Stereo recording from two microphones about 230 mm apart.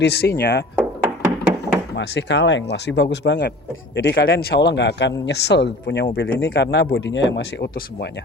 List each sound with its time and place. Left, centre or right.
0.0 s speech: left
0.8 s thunk: centre
2.0 s speech: left